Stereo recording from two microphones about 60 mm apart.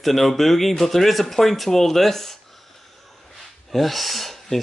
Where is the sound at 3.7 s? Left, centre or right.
Centre.